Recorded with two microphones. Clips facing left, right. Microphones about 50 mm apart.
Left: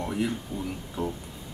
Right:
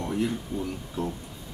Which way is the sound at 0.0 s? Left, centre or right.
Centre.